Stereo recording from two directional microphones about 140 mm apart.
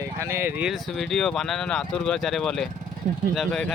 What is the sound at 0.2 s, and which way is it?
Speech, 20° right (ahead or behind).